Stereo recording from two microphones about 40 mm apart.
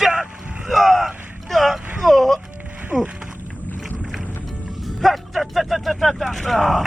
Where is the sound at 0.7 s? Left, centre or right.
Centre.